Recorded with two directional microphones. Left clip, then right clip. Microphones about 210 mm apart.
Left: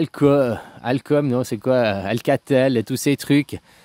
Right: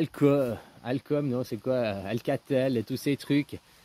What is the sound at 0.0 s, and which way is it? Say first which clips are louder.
Speech: left 8 dB; 30° left (ahead or behind).